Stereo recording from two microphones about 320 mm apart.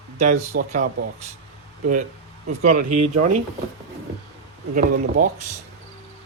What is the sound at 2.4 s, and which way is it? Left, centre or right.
Speech, right.